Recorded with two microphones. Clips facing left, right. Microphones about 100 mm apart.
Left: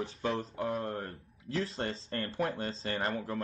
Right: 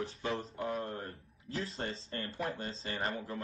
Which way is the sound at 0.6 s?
45° left (ahead or behind).